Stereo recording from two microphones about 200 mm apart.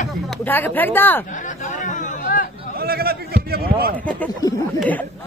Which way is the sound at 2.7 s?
50° right (ahead or behind).